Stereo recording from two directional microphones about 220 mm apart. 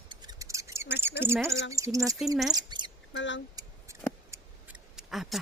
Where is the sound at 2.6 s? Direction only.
20° right (ahead or behind).